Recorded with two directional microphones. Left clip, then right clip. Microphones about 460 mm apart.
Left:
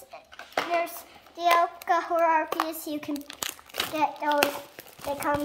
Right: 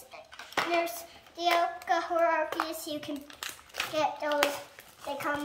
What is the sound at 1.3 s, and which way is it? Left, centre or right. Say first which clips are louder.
Child singing: left 5 dB; centre.